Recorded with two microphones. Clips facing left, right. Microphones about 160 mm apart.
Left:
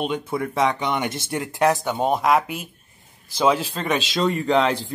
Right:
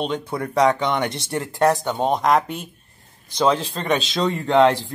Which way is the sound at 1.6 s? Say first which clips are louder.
Right 1 dB; 5° left (ahead or behind).